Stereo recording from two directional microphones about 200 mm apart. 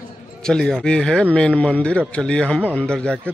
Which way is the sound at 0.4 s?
5° left (ahead or behind).